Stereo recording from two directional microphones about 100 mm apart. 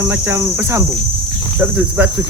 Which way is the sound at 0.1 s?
25° right (ahead or behind).